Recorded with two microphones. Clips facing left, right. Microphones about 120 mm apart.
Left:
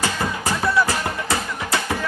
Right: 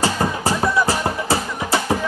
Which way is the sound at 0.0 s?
30° right (ahead or behind).